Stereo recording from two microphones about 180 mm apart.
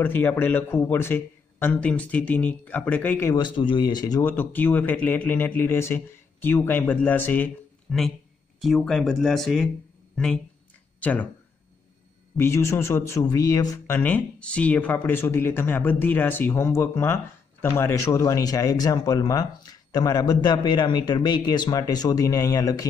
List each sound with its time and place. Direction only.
0.0 s speech: 10° left (ahead or behind)
3.3 s speech: 25° left (ahead or behind); by 11.2 s 10° left (ahead or behind)
12.4 s speech: 15° left (ahead or behind)
13.9 s speech: 10° left (ahead or behind)